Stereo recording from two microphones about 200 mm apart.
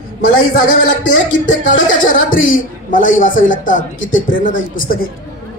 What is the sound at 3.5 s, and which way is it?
A man's voice, 40° left (ahead or behind).